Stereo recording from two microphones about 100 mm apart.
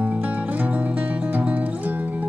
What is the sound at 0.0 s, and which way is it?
Music, 15° right (ahead or behind).